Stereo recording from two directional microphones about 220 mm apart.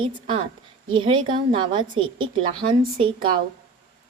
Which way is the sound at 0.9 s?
20° right (ahead or behind).